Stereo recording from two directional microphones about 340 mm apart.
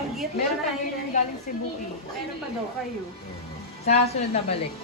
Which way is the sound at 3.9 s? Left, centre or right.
Centre.